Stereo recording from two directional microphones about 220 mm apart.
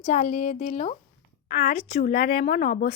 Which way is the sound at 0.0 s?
35° left (ahead or behind).